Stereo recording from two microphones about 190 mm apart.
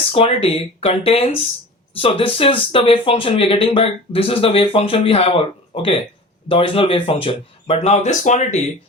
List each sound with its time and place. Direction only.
0.1 s speech: 30° left (ahead or behind)